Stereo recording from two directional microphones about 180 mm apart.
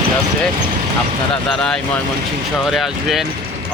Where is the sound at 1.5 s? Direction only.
5° left (ahead or behind).